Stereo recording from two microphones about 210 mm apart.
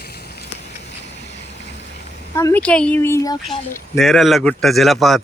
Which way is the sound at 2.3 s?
10° left (ahead or behind).